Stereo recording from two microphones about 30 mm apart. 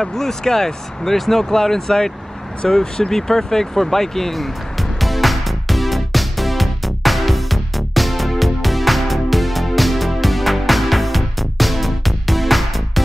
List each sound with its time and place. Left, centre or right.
0.0 s speech: centre
5.0 s music: centre